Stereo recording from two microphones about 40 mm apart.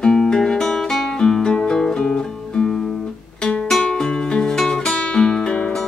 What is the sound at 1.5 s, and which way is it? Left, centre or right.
Music, left.